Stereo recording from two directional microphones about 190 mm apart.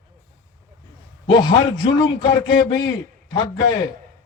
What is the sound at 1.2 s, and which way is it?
A man's voice, 25° left (ahead or behind).